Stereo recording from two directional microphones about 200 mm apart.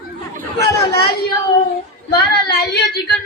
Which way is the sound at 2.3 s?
55° left (ahead or behind).